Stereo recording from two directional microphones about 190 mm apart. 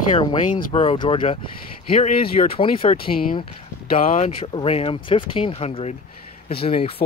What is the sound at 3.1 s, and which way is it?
Speech, 50° left (ahead or behind).